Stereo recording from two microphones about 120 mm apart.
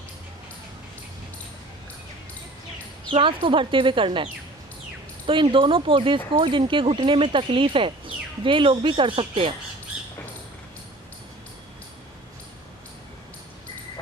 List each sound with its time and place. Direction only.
3.1 s speech: 45° right (ahead or behind)